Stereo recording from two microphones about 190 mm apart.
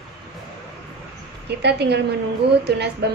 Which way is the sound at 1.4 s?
60° right (ahead or behind).